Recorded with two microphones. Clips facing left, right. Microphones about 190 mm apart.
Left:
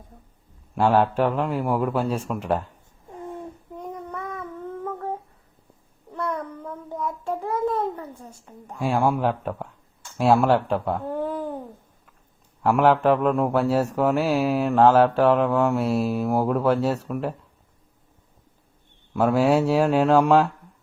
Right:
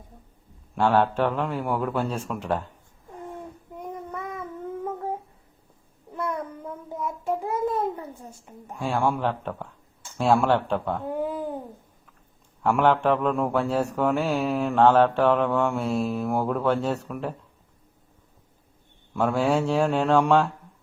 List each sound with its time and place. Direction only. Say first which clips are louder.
0.8 s a man's voice: left 2 dB; 5° left (ahead or behind)
3.8 s child singing: left 1 dB; 15° right (ahead or behind)
6.1 s a sound: left 1 dB; 10° right (ahead or behind)
8.5 s a woman's voice: left 1 dB; 15° right (ahead or behind)
8.8 s a man's voice: left 3 dB; 10° left (ahead or behind)
11.1 s a sound: left 1 dB; 10° right (ahead or behind)
12.6 s speech: left 3 dB; centre (ahead or behind)
19.1 s speech: left 4 dB; 5° left (ahead or behind)